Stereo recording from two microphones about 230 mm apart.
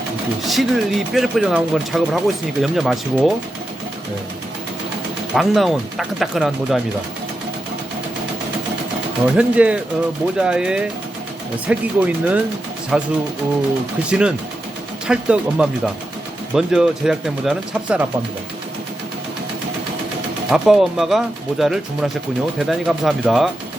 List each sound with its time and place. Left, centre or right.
0.4 s speech: centre
5.3 s speech: centre
9.2 s speech: centre
14.1 s speech: centre
20.5 s speech: centre